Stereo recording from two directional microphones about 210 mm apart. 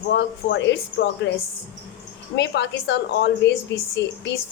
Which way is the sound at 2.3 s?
55° left (ahead or behind).